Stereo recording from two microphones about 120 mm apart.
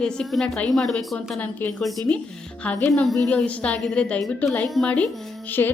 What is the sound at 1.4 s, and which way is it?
Speech, 15° left (ahead or behind).